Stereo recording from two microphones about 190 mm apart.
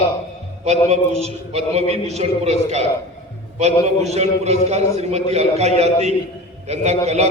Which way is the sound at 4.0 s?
35° right (ahead or behind).